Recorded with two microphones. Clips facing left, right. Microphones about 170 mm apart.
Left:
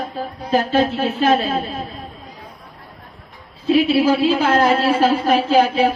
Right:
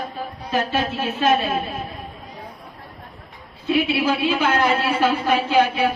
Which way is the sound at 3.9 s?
35° left (ahead or behind).